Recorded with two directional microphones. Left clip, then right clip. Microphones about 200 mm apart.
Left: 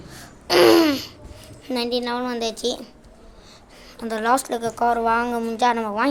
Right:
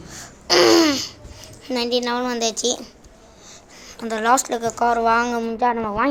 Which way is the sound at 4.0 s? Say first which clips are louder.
Right 2 dB; 5° left (ahead or behind).